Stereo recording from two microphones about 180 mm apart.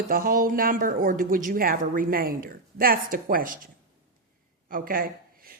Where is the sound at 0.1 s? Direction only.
50° right (ahead or behind).